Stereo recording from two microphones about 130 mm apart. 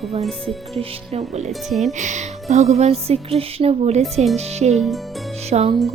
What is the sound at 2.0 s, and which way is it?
Speech, 65° right (ahead or behind).